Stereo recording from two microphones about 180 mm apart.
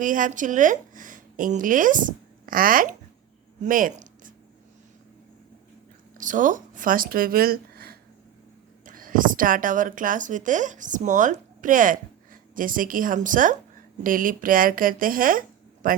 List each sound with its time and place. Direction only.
0.0 s speech: 45° right (ahead or behind)
6.1 s speech: 45° right (ahead or behind)